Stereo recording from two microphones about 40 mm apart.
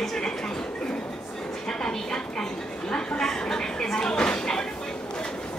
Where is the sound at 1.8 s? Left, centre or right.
Centre.